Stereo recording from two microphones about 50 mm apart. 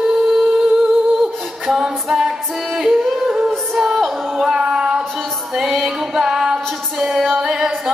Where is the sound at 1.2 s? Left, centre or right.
Centre.